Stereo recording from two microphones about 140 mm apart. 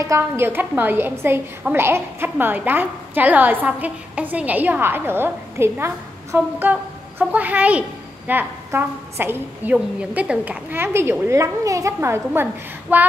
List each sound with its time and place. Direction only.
0.0 s a woman's voice: 20° right (ahead or behind)